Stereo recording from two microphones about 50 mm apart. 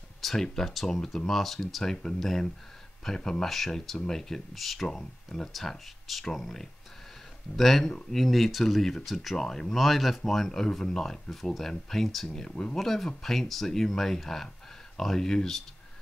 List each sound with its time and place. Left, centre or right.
0.2 s speech: centre
12.3 s speech: centre
12.7 s speech: centre